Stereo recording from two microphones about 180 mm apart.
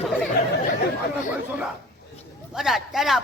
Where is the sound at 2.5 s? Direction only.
Centre (ahead or behind).